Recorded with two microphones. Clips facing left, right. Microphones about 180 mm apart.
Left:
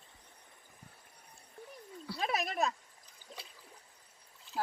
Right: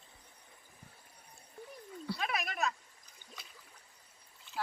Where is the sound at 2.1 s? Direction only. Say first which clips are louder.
Left 4 dB; 35° left (ahead or behind).